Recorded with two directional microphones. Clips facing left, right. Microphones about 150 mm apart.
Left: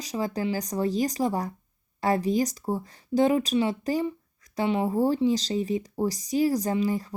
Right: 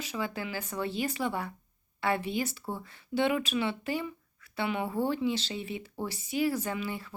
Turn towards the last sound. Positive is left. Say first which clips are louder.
# left 9 dB
turn(degrees=40)  # may be behind; listen again after turning